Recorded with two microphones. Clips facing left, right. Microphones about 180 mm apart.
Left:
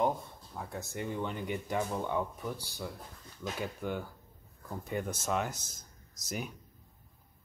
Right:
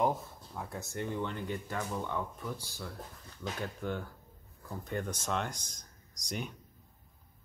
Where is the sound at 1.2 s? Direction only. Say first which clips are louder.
Left 1 dB; 15° left (ahead or behind).